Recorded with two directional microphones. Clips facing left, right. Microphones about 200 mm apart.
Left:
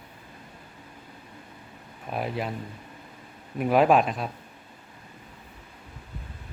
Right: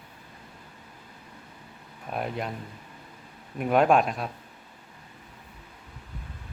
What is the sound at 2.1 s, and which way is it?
Speech, centre (ahead or behind).